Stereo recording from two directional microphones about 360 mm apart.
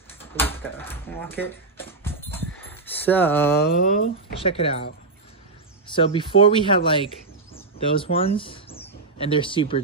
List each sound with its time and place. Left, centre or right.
0.2 s drawer open or close: centre
2.6 s a sound: centre
3.8 s speech: left
5.9 s speech: centre
7.5 s bird: centre